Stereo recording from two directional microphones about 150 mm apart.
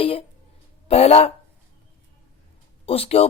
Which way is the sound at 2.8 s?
40° left (ahead or behind).